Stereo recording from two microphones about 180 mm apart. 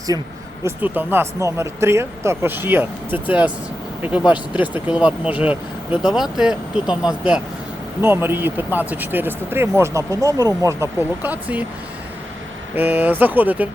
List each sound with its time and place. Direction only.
0.1 s speech: 20° right (ahead or behind); by 6.9 s 5° right (ahead or behind)
8.0 s speech: 10° right (ahead or behind)
12.7 s speech: 10° right (ahead or behind)